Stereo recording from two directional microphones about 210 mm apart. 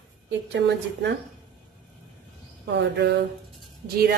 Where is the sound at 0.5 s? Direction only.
55° right (ahead or behind).